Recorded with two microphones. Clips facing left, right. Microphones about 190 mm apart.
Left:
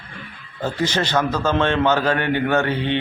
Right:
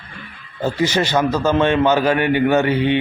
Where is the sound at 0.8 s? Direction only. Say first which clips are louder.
Right 3 dB; 10° right (ahead or behind).